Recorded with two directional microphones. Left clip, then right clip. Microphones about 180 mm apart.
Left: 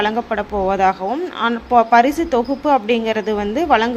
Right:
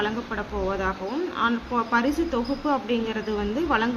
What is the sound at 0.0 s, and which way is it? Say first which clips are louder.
A woman's voice: left 9 dB; 45° left (ahead or behind).